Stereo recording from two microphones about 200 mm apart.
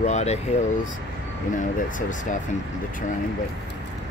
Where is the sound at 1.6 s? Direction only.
40° left (ahead or behind).